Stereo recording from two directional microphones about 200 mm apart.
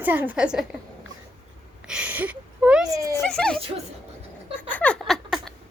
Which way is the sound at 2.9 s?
15° right (ahead or behind).